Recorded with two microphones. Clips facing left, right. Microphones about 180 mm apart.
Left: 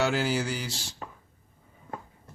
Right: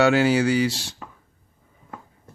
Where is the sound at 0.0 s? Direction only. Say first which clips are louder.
Right 9 dB; 70° right (ahead or behind).